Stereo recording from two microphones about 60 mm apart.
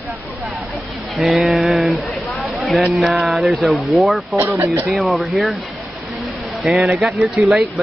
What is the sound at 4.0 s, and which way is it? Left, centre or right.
Speech, centre.